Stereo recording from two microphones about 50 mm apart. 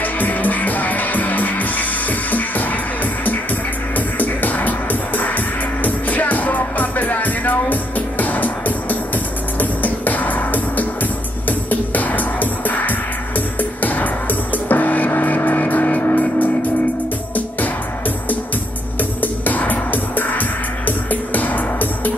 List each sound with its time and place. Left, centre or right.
0.0 s music: left
18.9 s music: left